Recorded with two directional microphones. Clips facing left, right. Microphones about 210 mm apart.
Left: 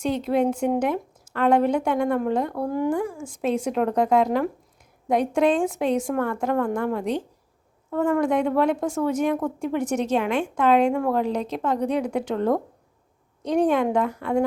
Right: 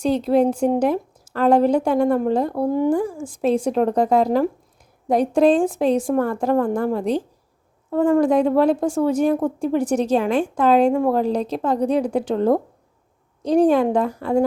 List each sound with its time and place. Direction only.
0.0 s a woman's voice: 35° right (ahead or behind)